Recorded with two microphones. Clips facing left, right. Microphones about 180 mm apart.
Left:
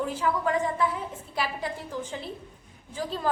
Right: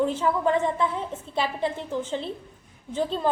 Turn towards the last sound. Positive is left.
turn(degrees=-25)  # may be behind; listen again after turning